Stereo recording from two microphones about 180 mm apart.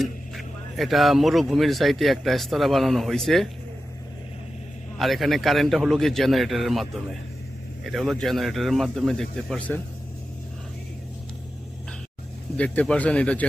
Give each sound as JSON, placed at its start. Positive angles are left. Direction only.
{"t": 0.0, "sound": "speech", "side_deg": 0}
{"t": 4.9, "sound": "speech", "side_deg": 0}
{"t": 12.5, "sound": "speech", "side_deg": 5}